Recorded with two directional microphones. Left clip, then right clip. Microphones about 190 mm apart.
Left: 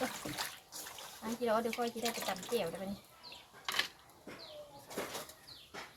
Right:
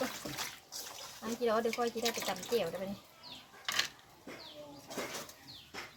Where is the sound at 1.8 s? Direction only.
25° right (ahead or behind).